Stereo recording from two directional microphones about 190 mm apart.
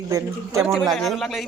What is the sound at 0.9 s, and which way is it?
Speech, centre (ahead or behind).